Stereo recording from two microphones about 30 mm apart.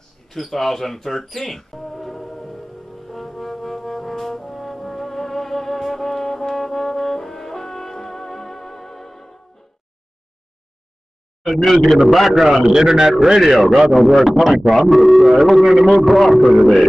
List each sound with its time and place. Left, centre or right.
0.3 s speech: centre
3.1 s brass instrument: centre
11.4 s a man's voice: centre
12.6 s a man's voice: right
13.4 s a man's voice: centre
14.7 s a man's voice: centre